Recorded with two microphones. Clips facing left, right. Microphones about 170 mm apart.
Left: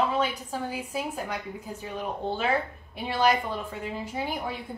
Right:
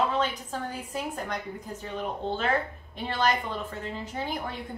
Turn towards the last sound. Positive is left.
turn(degrees=10)  # may be behind; listen again after turning